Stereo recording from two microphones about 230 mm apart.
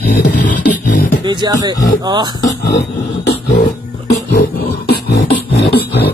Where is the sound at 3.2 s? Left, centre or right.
Left.